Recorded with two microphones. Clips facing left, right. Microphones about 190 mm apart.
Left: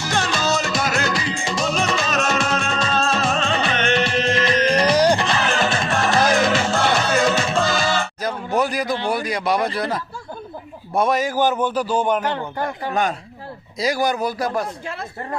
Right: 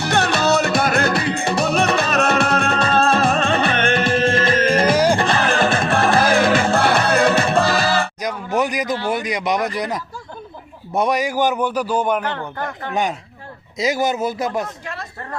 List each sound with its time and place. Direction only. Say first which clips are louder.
0.0 s music: right 4 dB; 60° right (ahead or behind)
8.5 s a sound: right 1 dB; 15° right (ahead or behind)
9.0 s a man's voice: even; 20° right (ahead or behind)
12.2 s speech: left 2 dB; 15° left (ahead or behind)
12.9 s a man's voice: right 3 dB; 15° right (ahead or behind)
14.8 s speech: left 2 dB; 20° left (ahead or behind)